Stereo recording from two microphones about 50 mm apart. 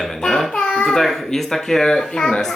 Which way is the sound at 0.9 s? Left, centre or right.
Centre.